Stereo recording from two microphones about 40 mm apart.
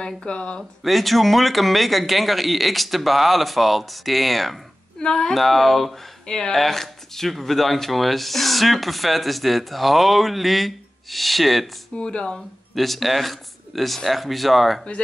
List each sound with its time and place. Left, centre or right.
0.0 s speech: left
0.8 s speech: centre
5.0 s speech: centre
5.3 s speech: centre
6.2 s speech: centre
12.0 s speech: left
12.7 s speech: centre